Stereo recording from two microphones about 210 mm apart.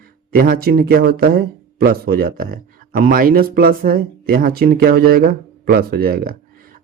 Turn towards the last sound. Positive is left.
turn(degrees=-45)  # may be behind; listen again after turning